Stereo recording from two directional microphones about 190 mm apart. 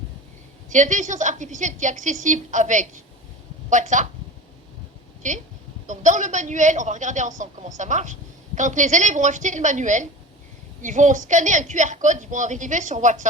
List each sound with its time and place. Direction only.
0.7 s a woman's voice: 40° right (ahead or behind)
5.2 s a woman's voice: 40° right (ahead or behind)